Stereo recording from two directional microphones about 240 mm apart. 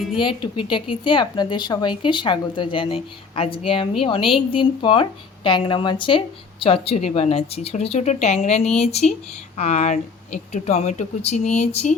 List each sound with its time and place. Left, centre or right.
0.2 s speech: left